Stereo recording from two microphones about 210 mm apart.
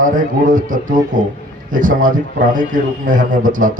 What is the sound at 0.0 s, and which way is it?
A man's voice, 40° right (ahead or behind).